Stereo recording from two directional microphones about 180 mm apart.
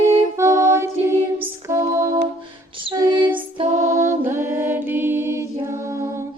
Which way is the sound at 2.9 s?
30° right (ahead or behind).